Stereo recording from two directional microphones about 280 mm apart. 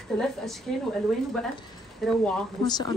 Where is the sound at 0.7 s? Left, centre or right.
Centre.